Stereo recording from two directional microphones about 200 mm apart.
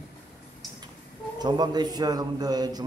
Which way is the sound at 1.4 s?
20° right (ahead or behind).